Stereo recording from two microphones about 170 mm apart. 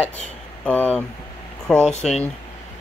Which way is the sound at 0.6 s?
10° left (ahead or behind).